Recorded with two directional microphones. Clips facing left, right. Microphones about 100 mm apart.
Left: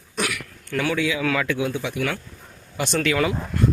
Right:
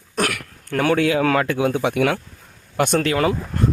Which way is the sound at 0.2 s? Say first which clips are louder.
Right 4 dB; 50° right (ahead or behind).